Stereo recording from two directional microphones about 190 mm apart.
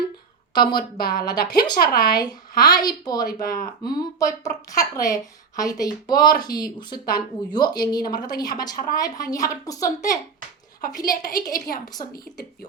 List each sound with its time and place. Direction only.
0.5 s a woman's voice: 25° left (ahead or behind)
0.8 s a woman's voice: 50° left (ahead or behind)
1.2 s a woman's voice: 20° left (ahead or behind)